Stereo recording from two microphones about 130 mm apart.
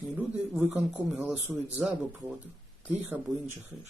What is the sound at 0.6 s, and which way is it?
Speech, 15° right (ahead or behind).